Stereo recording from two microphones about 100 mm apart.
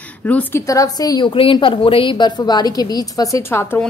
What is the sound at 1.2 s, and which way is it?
A woman's voice, 60° left (ahead or behind).